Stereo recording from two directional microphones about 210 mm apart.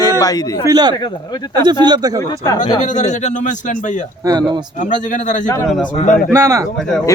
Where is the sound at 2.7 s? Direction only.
35° left (ahead or behind).